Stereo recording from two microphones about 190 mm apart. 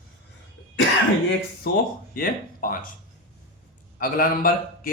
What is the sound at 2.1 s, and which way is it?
Speech, 50° left (ahead or behind).